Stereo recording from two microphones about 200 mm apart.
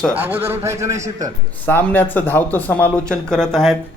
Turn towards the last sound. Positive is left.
turn(degrees=0)  # may be behind; listen again after turning